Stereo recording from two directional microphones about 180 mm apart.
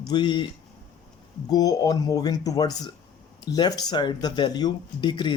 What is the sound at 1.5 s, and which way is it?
Speech, 20° left (ahead or behind).